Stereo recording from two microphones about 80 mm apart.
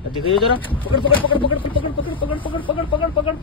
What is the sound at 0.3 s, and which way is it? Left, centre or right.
Speech, left.